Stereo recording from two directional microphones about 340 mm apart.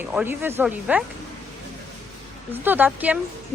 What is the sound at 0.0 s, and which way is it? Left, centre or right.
A woman's voice, centre.